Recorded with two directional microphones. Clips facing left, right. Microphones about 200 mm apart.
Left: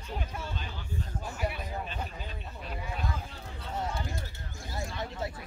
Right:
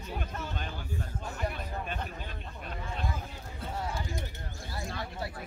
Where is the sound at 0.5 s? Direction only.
55° right (ahead or behind).